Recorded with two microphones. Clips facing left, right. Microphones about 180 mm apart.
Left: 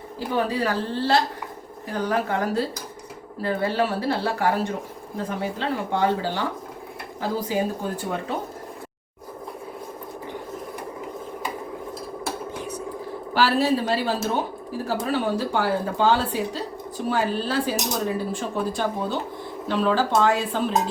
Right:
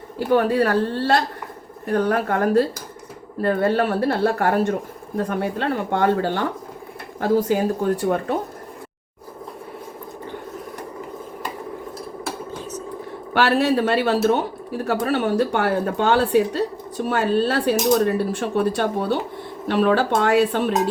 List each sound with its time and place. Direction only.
0.2 s speech: 55° right (ahead or behind)
12.5 s cutlery: 10° left (ahead or behind)
13.3 s speech: 70° right (ahead or behind)